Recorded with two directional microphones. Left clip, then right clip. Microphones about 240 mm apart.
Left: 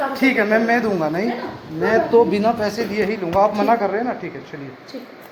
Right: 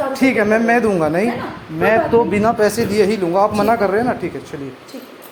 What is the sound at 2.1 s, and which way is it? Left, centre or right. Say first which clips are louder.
Speech: right 1 dB; right.